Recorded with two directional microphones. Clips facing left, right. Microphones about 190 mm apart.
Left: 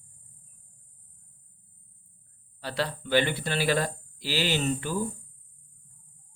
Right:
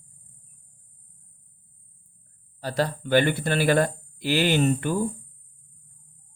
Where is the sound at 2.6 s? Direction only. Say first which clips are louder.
Right 5 dB; 45° right (ahead or behind).